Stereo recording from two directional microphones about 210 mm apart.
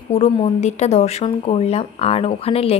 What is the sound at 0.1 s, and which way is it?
A woman's voice, 30° left (ahead or behind).